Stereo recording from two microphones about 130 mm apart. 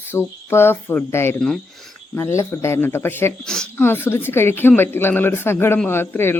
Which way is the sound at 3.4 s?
5° left (ahead or behind).